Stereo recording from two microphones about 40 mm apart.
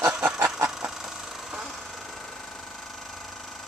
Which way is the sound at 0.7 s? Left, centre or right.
Centre.